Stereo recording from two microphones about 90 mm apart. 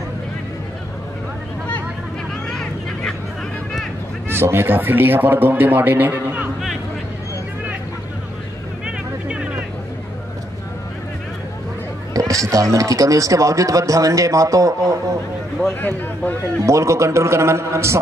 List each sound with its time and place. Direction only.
2.5 s vehicle: 5° left (ahead or behind)
4.3 s a man's voice: 25° right (ahead or behind)
8.8 s music: 15° right (ahead or behind)
12.1 s speech: 40° right (ahead or behind)
16.6 s speech: 35° right (ahead or behind)